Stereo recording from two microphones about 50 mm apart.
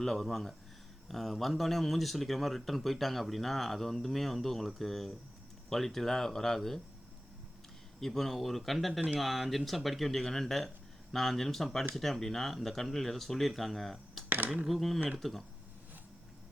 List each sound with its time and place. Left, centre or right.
0.0 s speech: centre
8.0 s speech: centre
14.3 s a sound: right
14.5 s speech: centre